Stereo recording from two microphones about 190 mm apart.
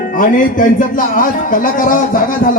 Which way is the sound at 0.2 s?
45° left (ahead or behind).